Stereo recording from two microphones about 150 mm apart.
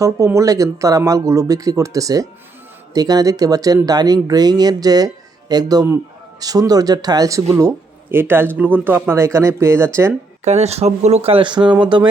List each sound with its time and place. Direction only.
0.0 s speech: 20° right (ahead or behind)
10.4 s speech: 45° right (ahead or behind); by 11.7 s 30° right (ahead or behind)